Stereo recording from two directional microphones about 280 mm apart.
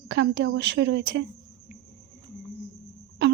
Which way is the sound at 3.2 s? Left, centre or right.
Right.